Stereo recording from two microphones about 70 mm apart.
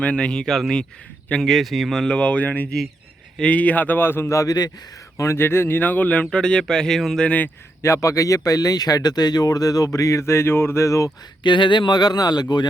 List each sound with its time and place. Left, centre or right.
0.0 s speech: centre; by 4.4 s left
4.4 s speech: left
5.1 s speech: left; by 7.3 s centre
7.3 s speech: left
7.8 s speech: left
11.4 s speech: left